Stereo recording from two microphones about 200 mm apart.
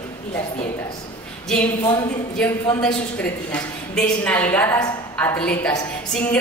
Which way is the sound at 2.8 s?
5° left (ahead or behind).